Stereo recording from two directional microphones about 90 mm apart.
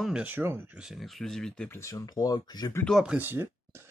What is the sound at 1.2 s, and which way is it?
Speech, 5° left (ahead or behind).